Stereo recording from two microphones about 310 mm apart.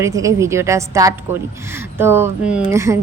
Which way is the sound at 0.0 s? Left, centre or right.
Centre.